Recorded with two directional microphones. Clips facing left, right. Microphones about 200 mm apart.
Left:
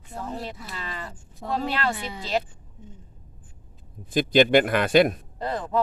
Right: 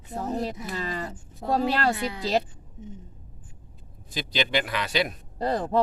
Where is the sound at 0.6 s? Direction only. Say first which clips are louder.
Right 5 dB; 40° right (ahead or behind).